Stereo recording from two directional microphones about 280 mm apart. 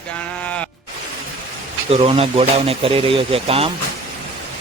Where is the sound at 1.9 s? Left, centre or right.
Right.